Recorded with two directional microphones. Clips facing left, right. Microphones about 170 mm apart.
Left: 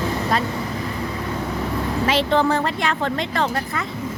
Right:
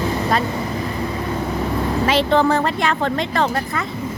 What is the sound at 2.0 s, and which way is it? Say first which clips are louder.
A woman's voice: right 2 dB; 50° right (ahead or behind).